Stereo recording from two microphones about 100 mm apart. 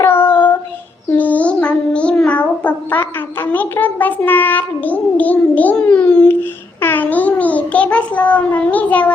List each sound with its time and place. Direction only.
0.0 s child singing: 20° left (ahead or behind)
6.8 s a child's voice: 20° left (ahead or behind)